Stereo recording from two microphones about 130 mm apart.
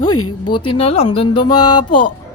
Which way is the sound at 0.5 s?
45° left (ahead or behind).